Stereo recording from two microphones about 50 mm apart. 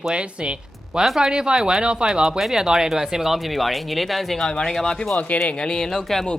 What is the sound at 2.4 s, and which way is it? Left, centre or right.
Speech, centre.